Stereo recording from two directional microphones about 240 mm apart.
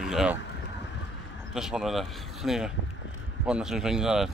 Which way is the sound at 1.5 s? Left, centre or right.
Centre.